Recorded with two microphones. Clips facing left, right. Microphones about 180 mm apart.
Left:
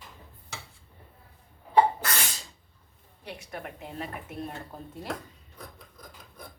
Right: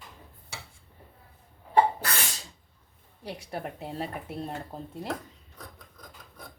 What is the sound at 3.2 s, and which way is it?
Speech, 35° right (ahead or behind).